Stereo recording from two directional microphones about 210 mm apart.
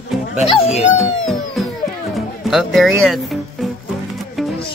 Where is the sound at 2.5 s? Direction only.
Centre (ahead or behind).